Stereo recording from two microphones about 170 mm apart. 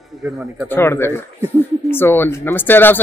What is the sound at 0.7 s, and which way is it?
Speech, 15° left (ahead or behind).